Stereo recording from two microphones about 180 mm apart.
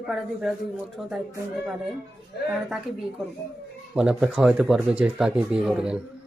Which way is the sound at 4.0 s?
5° right (ahead or behind).